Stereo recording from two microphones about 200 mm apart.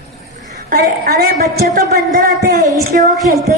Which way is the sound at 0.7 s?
50° right (ahead or behind).